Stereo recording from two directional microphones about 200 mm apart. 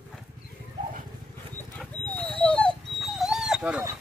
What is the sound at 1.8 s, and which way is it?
Dog, 10° left (ahead or behind).